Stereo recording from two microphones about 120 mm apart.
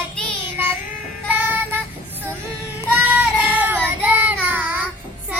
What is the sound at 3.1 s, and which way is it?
Child singing, 15° right (ahead or behind).